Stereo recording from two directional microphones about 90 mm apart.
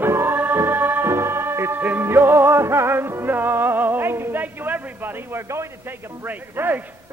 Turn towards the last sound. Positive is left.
turn(degrees=-20)  # may be behind; listen again after turning